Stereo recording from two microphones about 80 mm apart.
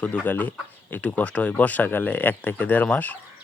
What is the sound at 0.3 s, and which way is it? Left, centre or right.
Speech, left.